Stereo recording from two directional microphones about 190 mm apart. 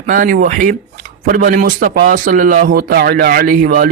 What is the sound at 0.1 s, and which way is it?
Speech, 45° right (ahead or behind).